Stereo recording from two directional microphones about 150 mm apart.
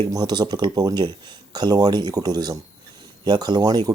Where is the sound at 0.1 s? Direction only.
25° right (ahead or behind).